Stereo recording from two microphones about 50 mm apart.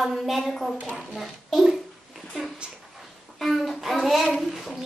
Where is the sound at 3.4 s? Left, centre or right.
Centre.